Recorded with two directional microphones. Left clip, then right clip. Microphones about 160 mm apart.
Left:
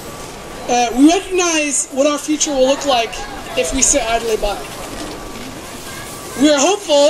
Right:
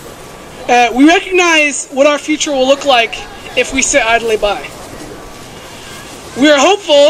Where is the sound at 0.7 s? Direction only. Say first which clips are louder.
Right 5 dB; 5° left (ahead or behind).